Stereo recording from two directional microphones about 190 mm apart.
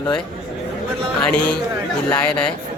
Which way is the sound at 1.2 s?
5° left (ahead or behind).